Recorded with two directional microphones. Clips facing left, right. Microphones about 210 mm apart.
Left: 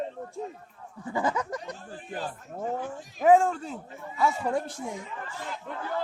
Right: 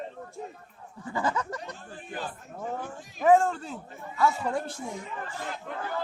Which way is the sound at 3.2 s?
10° left (ahead or behind).